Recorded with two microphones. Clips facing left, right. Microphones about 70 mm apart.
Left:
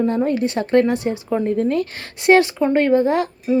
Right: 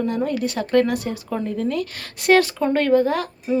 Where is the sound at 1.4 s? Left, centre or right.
Left.